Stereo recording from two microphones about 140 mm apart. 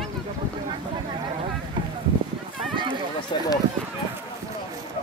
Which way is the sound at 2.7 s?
35° right (ahead or behind).